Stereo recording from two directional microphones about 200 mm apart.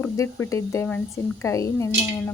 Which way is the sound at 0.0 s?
15° left (ahead or behind).